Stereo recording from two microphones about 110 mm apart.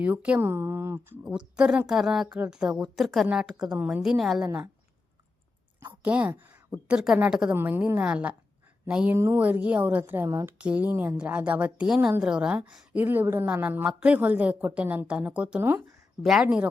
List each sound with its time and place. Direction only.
0.0 s a woman's voice: 15° right (ahead or behind)
1.2 s a woman's voice: 10° right (ahead or behind)
6.0 s a woman's voice: 15° right (ahead or behind)
7.5 s a woman's voice: 20° right (ahead or behind)
9.1 s speech: 25° right (ahead or behind)
9.4 s a woman's voice: 15° right (ahead or behind)